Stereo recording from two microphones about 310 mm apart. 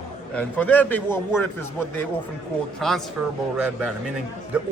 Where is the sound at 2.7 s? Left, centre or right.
Centre.